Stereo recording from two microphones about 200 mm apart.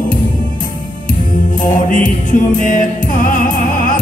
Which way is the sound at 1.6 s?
40° left (ahead or behind).